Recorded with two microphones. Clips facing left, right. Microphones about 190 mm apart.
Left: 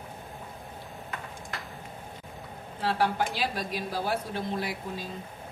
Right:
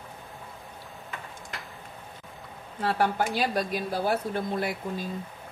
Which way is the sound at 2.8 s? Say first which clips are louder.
Right 1 dB; 50° right (ahead or behind).